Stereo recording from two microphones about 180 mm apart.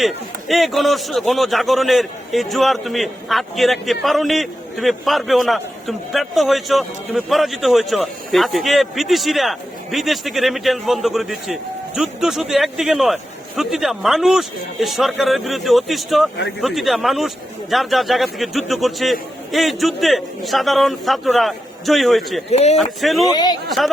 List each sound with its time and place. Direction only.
0.0 s a man's voice: centre (ahead or behind)
22.5 s speech: 40° left (ahead or behind)
22.8 s a man's voice: centre (ahead or behind)
23.2 s speech: 20° left (ahead or behind)